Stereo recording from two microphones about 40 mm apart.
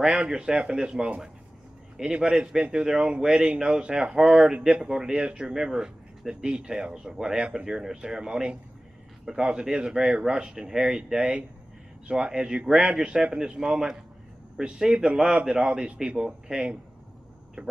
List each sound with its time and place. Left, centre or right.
0.0 s speech: centre
2.2 s speech: centre
9.2 s speech: centre
9.5 s speech: right